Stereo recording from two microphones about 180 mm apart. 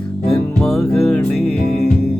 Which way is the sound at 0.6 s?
Centre (ahead or behind).